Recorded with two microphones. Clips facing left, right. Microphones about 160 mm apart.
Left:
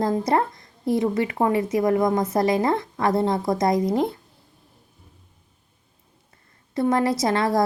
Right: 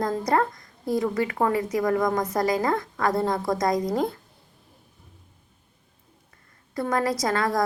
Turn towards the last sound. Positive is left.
turn(degrees=25)  # may be behind; listen again after turning